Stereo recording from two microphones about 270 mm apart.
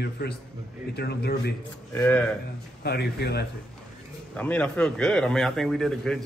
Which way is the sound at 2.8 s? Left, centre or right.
Left.